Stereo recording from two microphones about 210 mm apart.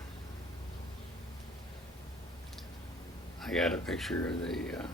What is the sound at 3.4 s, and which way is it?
Speech, centre (ahead or behind).